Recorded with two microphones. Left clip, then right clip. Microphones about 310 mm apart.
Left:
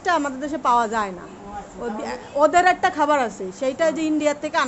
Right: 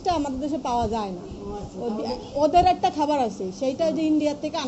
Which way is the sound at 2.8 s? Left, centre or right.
Left.